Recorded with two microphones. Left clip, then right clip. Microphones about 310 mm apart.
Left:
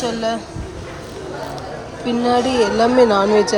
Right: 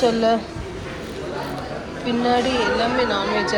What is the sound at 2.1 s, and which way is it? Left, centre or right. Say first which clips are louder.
A woman's voice: left 3 dB; centre.